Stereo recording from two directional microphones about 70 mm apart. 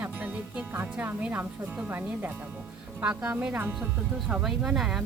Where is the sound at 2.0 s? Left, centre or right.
Right.